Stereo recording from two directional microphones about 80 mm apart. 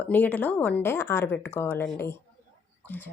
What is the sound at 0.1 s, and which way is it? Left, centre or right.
Speech, left.